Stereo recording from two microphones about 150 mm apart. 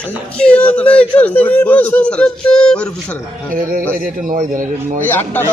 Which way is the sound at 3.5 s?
65° right (ahead or behind).